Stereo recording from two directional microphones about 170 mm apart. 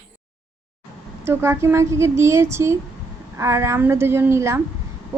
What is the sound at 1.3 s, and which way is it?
A woman's voice, 15° right (ahead or behind).